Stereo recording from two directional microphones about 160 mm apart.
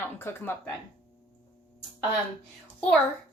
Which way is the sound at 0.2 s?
15° left (ahead or behind).